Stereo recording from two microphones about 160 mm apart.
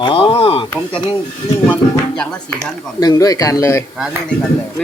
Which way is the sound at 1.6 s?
10° left (ahead or behind).